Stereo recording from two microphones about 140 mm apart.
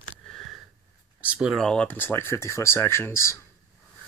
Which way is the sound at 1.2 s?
10° right (ahead or behind).